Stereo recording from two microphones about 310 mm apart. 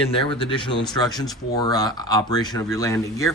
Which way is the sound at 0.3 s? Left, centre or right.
Centre.